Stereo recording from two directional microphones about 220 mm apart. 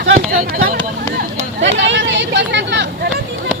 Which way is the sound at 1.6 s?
55° right (ahead or behind).